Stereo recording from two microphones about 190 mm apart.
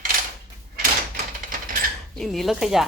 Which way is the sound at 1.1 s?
45° right (ahead or behind).